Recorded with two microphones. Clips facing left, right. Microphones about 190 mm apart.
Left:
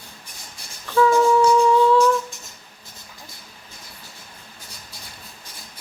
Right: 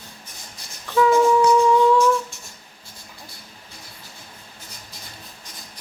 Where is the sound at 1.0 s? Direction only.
15° right (ahead or behind).